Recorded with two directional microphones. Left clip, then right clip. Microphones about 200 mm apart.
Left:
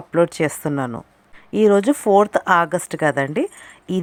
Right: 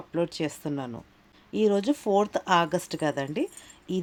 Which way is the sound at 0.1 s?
25° left (ahead or behind).